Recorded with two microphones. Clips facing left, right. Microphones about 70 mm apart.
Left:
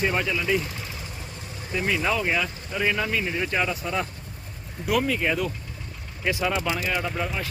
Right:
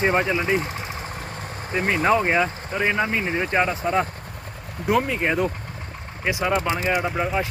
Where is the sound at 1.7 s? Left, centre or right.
Right.